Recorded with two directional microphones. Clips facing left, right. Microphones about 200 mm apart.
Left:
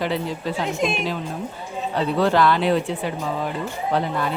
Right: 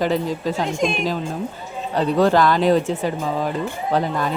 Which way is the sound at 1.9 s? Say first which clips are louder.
Right 3 dB; 40° right (ahead or behind).